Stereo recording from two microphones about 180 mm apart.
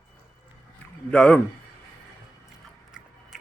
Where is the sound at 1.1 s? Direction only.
5° left (ahead or behind).